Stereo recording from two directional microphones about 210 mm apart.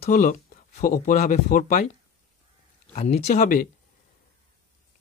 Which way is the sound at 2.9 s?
30° left (ahead or behind).